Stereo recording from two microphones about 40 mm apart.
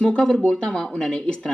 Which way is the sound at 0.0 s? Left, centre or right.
Left.